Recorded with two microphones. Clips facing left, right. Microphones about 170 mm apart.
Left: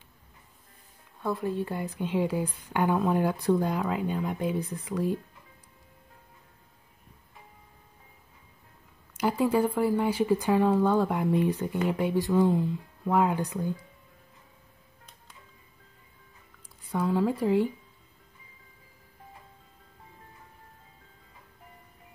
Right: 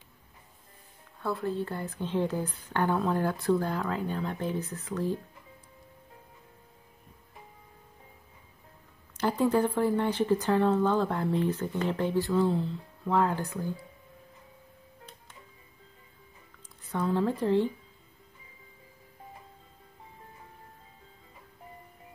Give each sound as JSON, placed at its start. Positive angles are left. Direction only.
{"t": 1.2, "sound": "speech", "side_deg": 15}
{"t": 9.1, "sound": "speech", "side_deg": 10}
{"t": 16.8, "sound": "speech", "side_deg": 10}